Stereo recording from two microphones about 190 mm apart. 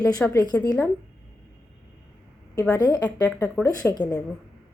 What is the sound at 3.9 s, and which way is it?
Speech, 20° left (ahead or behind).